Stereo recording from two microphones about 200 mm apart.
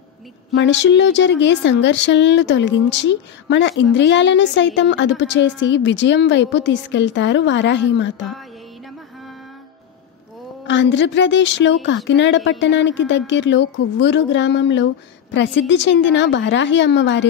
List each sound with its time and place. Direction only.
0.6 s speech: 60° left (ahead or behind)
10.7 s speech: 65° left (ahead or behind)